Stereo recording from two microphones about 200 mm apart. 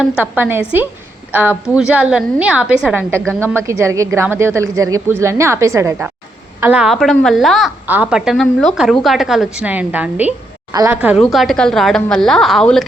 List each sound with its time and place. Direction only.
0.2 s a woman's voice: 10° right (ahead or behind)
10.7 s a woman's voice: 20° right (ahead or behind)
10.9 s a woman's voice: 10° right (ahead or behind)